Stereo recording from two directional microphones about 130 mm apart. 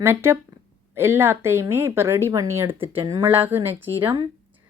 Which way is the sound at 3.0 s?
25° right (ahead or behind).